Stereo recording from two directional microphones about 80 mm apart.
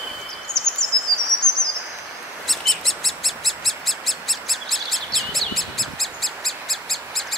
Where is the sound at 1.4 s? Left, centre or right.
Right.